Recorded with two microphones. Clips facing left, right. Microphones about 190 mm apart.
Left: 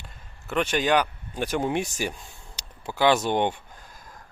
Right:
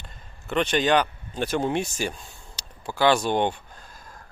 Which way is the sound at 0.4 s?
5° left (ahead or behind).